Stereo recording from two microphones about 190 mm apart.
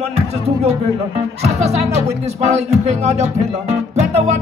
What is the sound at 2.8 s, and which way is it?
Music, 35° right (ahead or behind).